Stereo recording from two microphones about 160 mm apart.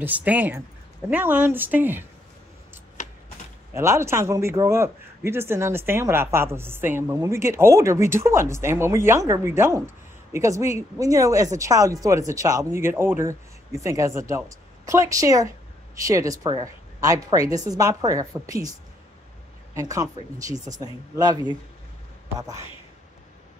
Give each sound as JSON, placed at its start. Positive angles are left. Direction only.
{"t": 0.0, "sound": "a man's voice", "side_deg": -10}
{"t": 3.7, "sound": "a man's voice", "side_deg": -15}
{"t": 19.7, "sound": "speech", "side_deg": -20}